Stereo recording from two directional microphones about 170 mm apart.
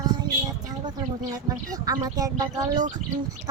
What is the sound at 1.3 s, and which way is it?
A woman's voice, 20° right (ahead or behind).